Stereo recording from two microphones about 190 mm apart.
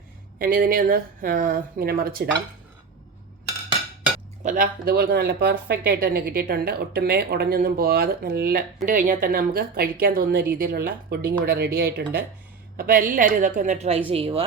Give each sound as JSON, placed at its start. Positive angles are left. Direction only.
{"t": 0.3, "sound": "a woman's voice", "side_deg": -50}
{"t": 4.4, "sound": "a woman's voice", "side_deg": -45}